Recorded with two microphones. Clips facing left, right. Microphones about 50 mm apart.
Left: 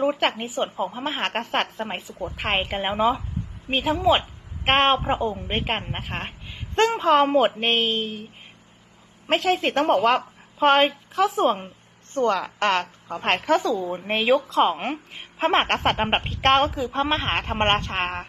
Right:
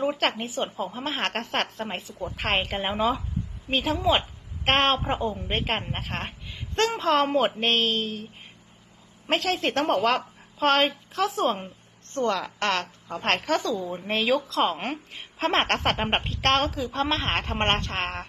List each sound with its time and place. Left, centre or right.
0.0 s a woman's voice: centre
0.6 s a woman's voice: left
0.9 s a woman's voice: centre
4.1 s a sound: centre
5.3 s a woman's voice: centre
6.7 s a woman's voice: left
9.2 s a woman's voice: centre
13.2 s a woman's voice: centre
13.7 s a woman's voice: left
13.9 s a woman's voice: centre
14.6 s a woman's voice: centre